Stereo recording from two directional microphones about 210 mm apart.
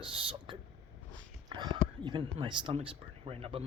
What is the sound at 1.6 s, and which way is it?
Speech, 20° right (ahead or behind).